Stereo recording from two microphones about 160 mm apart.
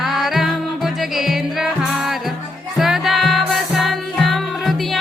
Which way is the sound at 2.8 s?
Centre (ahead or behind).